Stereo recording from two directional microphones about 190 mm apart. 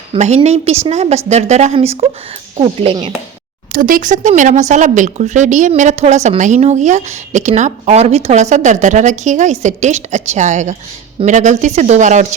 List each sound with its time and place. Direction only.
0.1 s a woman's voice: 30° right (ahead or behind)
3.7 s a woman's voice: 45° right (ahead or behind)